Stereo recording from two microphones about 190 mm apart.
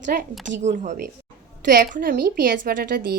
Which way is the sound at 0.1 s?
50° right (ahead or behind).